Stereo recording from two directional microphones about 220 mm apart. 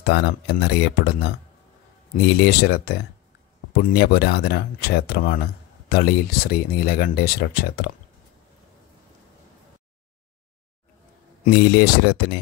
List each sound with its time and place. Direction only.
0.0 s speech: 45° left (ahead or behind)
11.4 s speech: 45° left (ahead or behind)